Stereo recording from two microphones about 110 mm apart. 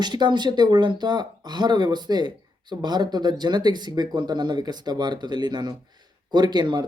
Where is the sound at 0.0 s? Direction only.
40° right (ahead or behind).